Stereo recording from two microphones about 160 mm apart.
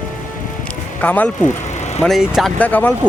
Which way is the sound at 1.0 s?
10° left (ahead or behind).